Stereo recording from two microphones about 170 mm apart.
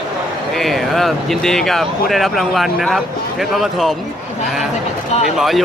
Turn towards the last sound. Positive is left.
turn(degrees=0)  # may be behind; listen again after turning